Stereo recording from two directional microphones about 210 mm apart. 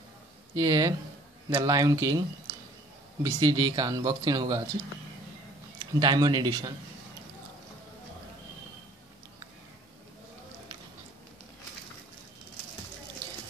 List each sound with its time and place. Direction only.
0.6 s speech: 15° right (ahead or behind)
5.9 s speech: 20° right (ahead or behind)